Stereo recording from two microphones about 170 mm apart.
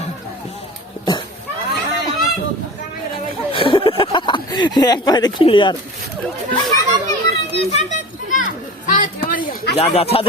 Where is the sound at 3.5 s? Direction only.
30° left (ahead or behind).